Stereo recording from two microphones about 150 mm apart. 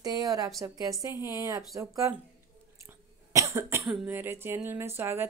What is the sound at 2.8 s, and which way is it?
Cough, 20° right (ahead or behind).